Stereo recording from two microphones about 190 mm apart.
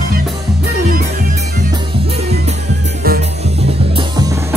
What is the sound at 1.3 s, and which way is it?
Music, 25° right (ahead or behind).